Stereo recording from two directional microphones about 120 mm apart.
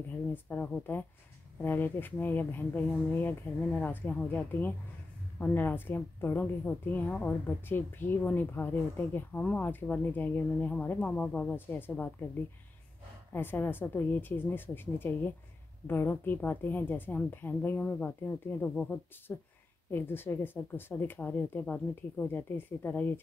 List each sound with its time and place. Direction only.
0.3 s a woman's voice: 15° left (ahead or behind)
13.3 s a woman's voice: 15° left (ahead or behind)